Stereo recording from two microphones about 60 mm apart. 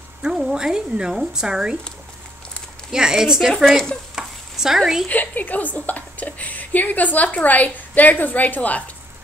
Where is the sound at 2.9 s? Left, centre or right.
Centre.